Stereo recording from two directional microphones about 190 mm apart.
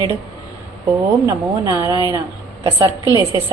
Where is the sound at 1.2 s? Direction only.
15° right (ahead or behind).